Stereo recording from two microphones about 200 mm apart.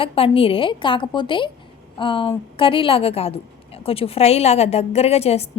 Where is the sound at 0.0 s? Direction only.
30° left (ahead or behind).